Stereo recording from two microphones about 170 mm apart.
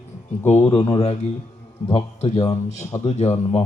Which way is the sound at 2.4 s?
20° left (ahead or behind).